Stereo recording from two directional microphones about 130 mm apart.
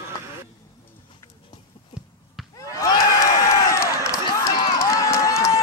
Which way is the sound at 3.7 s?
25° left (ahead or behind).